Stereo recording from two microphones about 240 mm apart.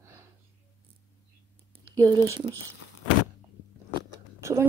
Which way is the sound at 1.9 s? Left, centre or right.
Centre.